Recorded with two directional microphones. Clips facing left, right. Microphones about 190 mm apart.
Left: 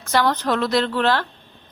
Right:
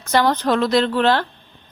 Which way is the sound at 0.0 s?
20° right (ahead or behind).